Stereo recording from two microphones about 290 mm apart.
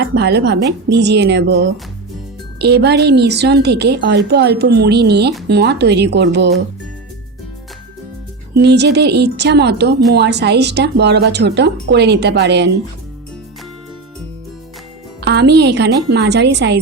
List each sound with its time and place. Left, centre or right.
0.0 s a woman's voice: right
8.6 s a woman's voice: right
15.2 s a woman's voice: right